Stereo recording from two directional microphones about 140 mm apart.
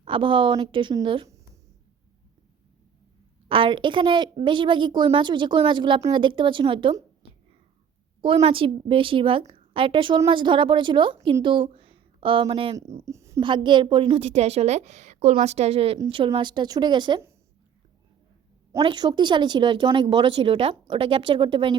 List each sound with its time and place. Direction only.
0.0 s speech: 40° right (ahead or behind)
3.5 s speech: 35° right (ahead or behind)
8.2 s a woman's voice: 40° right (ahead or behind)
13.1 s a sound: 20° right (ahead or behind)
13.4 s a woman's voice: 35° right (ahead or behind)
18.8 s speech: 35° right (ahead or behind)